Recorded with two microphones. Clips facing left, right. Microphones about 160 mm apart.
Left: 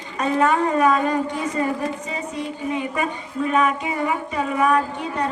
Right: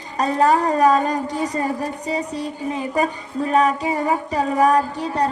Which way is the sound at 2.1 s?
35° right (ahead or behind).